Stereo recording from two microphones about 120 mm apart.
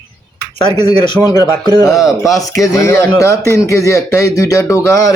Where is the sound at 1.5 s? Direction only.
35° right (ahead or behind).